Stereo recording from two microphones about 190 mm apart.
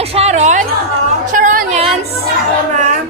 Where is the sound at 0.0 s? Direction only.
30° right (ahead or behind).